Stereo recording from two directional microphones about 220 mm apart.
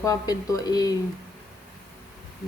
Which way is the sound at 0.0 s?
15° left (ahead or behind).